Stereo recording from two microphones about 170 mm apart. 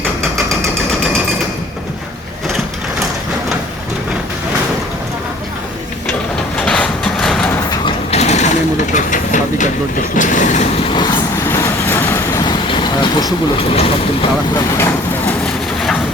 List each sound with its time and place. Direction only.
6.7 s a sound: 5° left (ahead or behind)
7.9 s sewing machine: 40° left (ahead or behind)
10.2 s vehicle: 50° left (ahead or behind)
11.4 s vehicle: 15° left (ahead or behind)
13.7 s speech: 35° left (ahead or behind)